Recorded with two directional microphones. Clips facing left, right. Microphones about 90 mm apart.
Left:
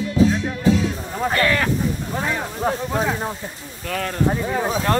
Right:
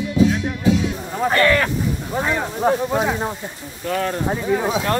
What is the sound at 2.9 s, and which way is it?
Snake, 5° right (ahead or behind).